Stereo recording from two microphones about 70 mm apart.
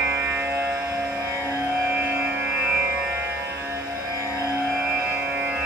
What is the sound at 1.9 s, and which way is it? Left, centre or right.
Music, right.